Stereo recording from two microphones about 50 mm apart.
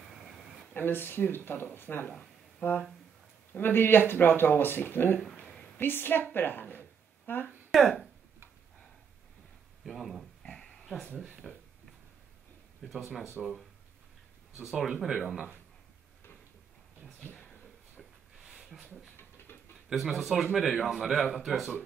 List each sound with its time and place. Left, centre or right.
0.7 s speech: left
7.7 s a man's voice: centre
9.8 s speech: centre
10.5 s dog: centre
11.4 s a man's voice: centre
12.8 s a man's voice: centre
17.2 s a sound: left
18.4 s a sound: centre
19.1 s a sound: left
19.9 s a man's voice: centre